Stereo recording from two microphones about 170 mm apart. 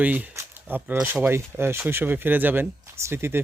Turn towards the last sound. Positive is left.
turn(degrees=-15)  # may be behind; listen again after turning